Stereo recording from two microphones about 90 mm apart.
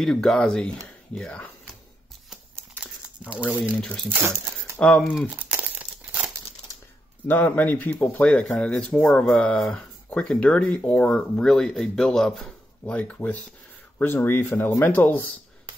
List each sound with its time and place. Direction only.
0.0 s speech: 5° left (ahead or behind)
3.8 s speech: 5° left (ahead or behind)
4.1 s speech: 25° right (ahead or behind)
4.7 s speech: 15° left (ahead or behind)
5.1 s crumpling: 15° right (ahead or behind)
7.2 s speech: 20° left (ahead or behind)